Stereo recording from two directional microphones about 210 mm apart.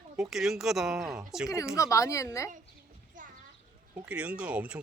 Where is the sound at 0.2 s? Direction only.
Centre (ahead or behind).